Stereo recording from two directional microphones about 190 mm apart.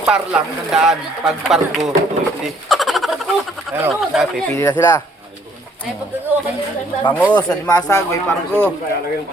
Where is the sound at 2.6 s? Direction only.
Centre (ahead or behind).